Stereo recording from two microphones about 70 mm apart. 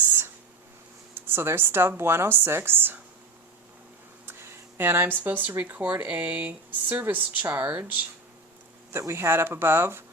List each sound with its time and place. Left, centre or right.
0.0 s a sound: right
1.3 s speech: right
4.3 s speech: right
8.9 s speech: right